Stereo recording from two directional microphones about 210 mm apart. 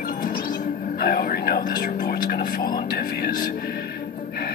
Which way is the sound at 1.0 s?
45° left (ahead or behind).